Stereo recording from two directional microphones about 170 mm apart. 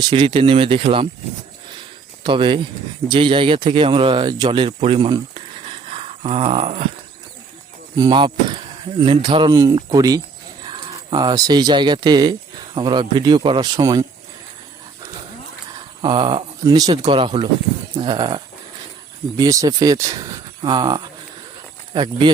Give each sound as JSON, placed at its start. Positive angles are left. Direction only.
{"t": 0.0, "sound": "speech", "side_deg": -25}
{"t": 2.2, "sound": "speech", "side_deg": -30}
{"t": 7.9, "sound": "speech", "side_deg": -25}
{"t": 16.0, "sound": "speech", "side_deg": -25}